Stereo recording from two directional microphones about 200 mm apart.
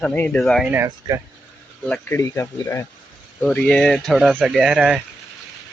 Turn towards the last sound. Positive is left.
turn(degrees=-5)  # may be behind; listen again after turning